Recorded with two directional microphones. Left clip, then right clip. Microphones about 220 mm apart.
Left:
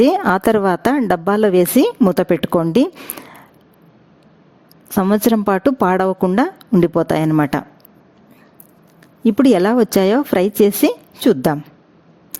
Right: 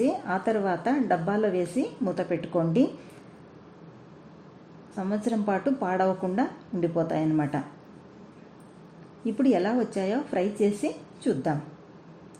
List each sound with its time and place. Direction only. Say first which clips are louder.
0.0 s a woman's voice: left 13 dB; 55° left (ahead or behind)
4.9 s a woman's voice: left 14 dB; 55° left (ahead or behind)
9.2 s a woman's voice: left 12 dB; 60° left (ahead or behind)